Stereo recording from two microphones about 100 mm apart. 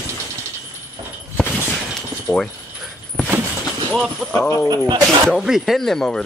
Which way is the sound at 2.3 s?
Centre (ahead or behind).